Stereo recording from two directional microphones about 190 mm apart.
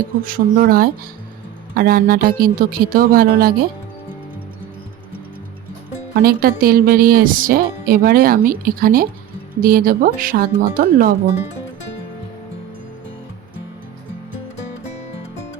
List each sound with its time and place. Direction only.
0.2 s speech: 45° right (ahead or behind)
6.1 s speech: 50° right (ahead or behind)
14.7 s music: 35° left (ahead or behind)